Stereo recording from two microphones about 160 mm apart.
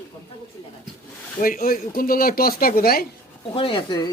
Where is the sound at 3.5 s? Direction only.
35° left (ahead or behind).